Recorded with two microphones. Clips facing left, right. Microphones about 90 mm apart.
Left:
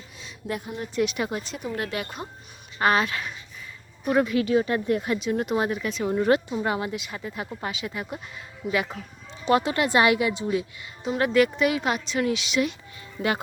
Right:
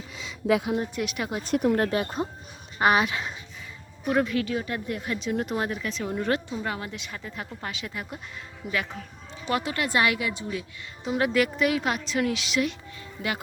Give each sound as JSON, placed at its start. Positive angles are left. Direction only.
{"t": 0.1, "sound": "a sound", "side_deg": -90}
{"t": 0.9, "sound": "a woman's voice", "side_deg": 0}
{"t": 1.5, "sound": "speech", "side_deg": -65}
{"t": 1.7, "sound": "speech", "side_deg": -35}
{"t": 2.7, "sound": "speech", "side_deg": -15}
{"t": 4.0, "sound": "a woman's voice", "side_deg": 5}
{"t": 4.5, "sound": "a woman's voice", "side_deg": 30}
{"t": 5.2, "sound": "a woman's voice", "side_deg": 5}
{"t": 6.1, "sound": "a woman's voice", "side_deg": 15}
{"t": 6.9, "sound": "a woman's voice", "side_deg": 10}
{"t": 9.5, "sound": "a woman's voice", "side_deg": 25}
{"t": 11.1, "sound": "a woman's voice", "side_deg": -5}